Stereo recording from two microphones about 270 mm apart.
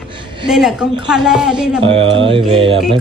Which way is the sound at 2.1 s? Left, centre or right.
Centre.